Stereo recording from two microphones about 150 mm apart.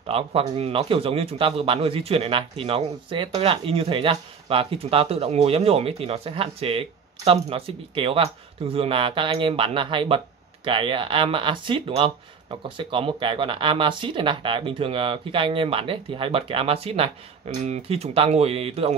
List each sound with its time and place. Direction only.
0.0 s a man's voice: 40° right (ahead or behind)